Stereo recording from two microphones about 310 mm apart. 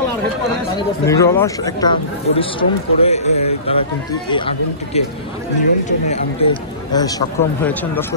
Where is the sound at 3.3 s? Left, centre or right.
Left.